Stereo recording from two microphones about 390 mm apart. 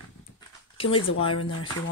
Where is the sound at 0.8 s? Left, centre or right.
Centre.